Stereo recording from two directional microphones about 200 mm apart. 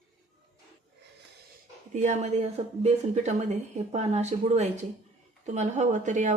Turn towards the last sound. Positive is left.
turn(degrees=-40)  # may be behind; listen again after turning